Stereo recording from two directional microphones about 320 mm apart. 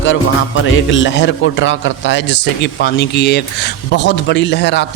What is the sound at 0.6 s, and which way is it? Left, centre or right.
A man's voice, left.